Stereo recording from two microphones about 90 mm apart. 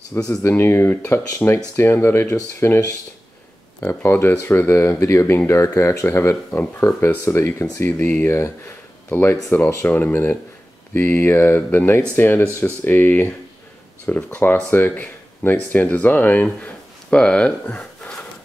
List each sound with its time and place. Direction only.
0.4 s speech: 30° left (ahead or behind)
3.8 s speech: 25° left (ahead or behind)
9.1 s speech: 20° left (ahead or behind)